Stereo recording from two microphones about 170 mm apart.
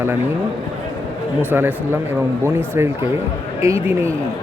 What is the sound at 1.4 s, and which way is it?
A man's voice, 10° right (ahead or behind).